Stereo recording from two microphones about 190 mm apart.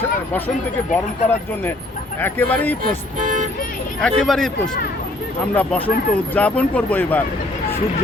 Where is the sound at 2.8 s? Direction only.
45° right (ahead or behind).